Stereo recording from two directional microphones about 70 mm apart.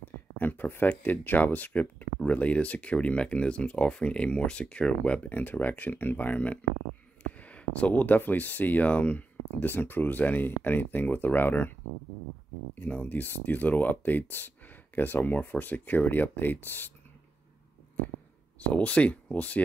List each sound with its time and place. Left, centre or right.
0.0 s speech: left
12.7 s speech: left
18.6 s speech: centre